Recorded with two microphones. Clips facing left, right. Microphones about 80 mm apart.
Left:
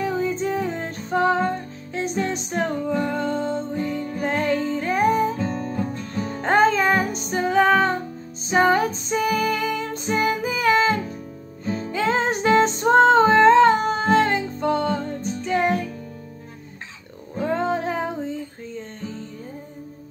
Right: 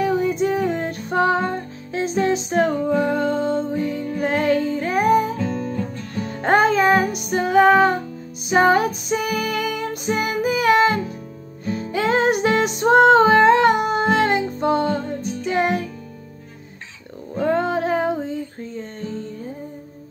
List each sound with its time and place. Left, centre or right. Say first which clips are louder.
0.0 s music: right 4 dB; centre
17.4 s a sound: right 4 dB; centre
17.7 s music: right 5 dB; centre